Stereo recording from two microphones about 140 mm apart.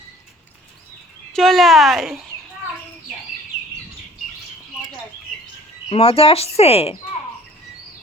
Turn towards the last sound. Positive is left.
turn(degrees=45)  # may be behind; listen again after turning